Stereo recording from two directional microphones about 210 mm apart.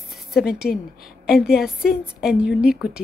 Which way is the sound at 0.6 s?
45° left (ahead or behind).